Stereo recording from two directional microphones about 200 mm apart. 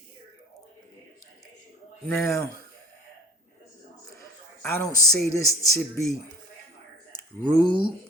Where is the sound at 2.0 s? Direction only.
15° left (ahead or behind).